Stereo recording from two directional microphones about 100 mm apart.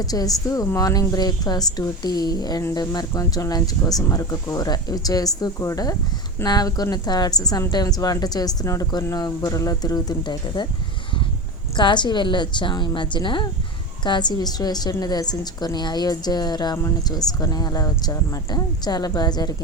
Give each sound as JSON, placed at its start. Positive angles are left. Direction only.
{"t": 0.0, "sound": "speech", "side_deg": 40}
{"t": 11.8, "sound": "a woman's voice", "side_deg": 50}